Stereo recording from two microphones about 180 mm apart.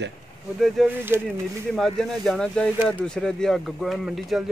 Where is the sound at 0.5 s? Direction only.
Centre (ahead or behind).